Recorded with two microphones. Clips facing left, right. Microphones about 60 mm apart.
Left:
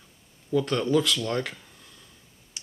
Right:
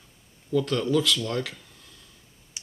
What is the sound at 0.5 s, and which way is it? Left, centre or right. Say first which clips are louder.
Speech: even; centre.